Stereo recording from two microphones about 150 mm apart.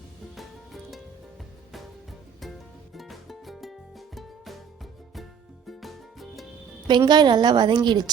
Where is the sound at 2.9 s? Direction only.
Centre (ahead or behind).